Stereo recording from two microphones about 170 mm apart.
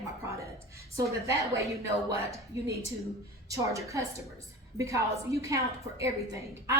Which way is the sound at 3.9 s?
20° right (ahead or behind).